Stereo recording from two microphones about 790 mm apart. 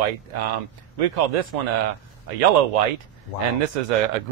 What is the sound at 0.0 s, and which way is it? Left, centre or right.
Speech, right.